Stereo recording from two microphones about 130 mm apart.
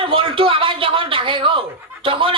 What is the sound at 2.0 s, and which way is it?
Snicker, 40° right (ahead or behind).